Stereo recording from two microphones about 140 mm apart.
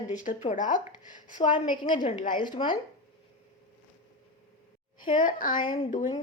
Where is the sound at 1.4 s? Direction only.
35° left (ahead or behind).